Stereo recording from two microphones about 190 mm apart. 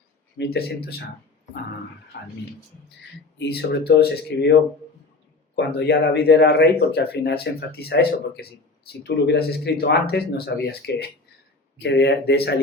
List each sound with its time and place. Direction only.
0.3 s speech: 55° left (ahead or behind)
2.1 s speech: 60° left (ahead or behind)
3.3 s speech: 60° left (ahead or behind)
5.5 s speech: 60° left (ahead or behind)